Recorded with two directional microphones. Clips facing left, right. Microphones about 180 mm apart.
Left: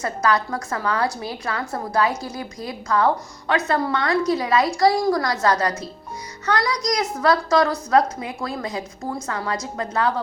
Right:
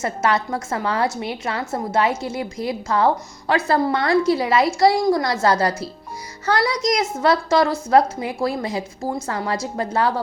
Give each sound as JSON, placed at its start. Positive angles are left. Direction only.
{"t": 0.0, "sound": "a woman's voice", "side_deg": -25}